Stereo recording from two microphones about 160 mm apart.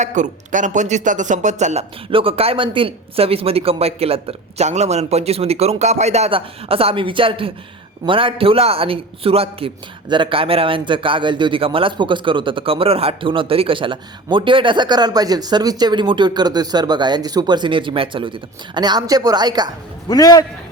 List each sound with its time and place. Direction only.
0.0 s speech: 50° right (ahead or behind)
2.0 s a man's voice: 35° right (ahead or behind)
20.1 s a man's voice: 25° left (ahead or behind)